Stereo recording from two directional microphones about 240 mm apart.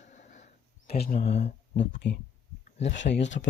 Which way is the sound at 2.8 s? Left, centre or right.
Left.